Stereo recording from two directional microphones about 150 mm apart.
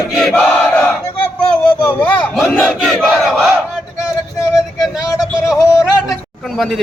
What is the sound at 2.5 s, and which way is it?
Crowd, 5° left (ahead or behind).